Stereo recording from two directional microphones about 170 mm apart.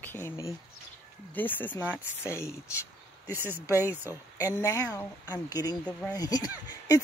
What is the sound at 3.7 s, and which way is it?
Speech, 15° left (ahead or behind).